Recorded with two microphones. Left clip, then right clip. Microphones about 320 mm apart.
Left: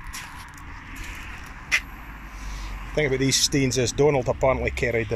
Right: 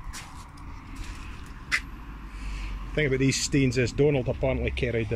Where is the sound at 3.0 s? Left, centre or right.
Left.